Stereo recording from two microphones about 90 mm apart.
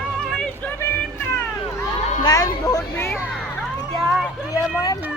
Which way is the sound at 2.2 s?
45° left (ahead or behind).